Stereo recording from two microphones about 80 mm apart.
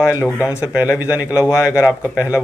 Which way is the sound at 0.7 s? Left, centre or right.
Centre.